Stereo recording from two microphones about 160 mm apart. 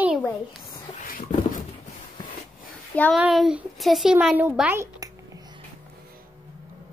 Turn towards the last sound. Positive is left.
turn(degrees=-25)  # may be behind; listen again after turning